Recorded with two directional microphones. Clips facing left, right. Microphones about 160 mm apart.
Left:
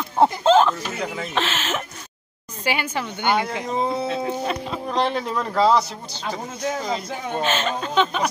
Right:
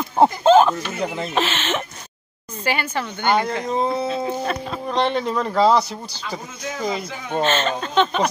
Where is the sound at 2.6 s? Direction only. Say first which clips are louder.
Right 1 dB; 10° left (ahead or behind).